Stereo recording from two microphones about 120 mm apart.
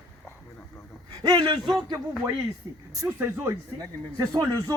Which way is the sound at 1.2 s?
35° right (ahead or behind).